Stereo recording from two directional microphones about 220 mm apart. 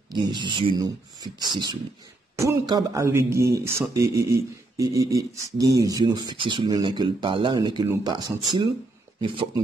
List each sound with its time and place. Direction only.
0.1 s a man's voice: 20° right (ahead or behind)
9.2 s speech: 25° right (ahead or behind)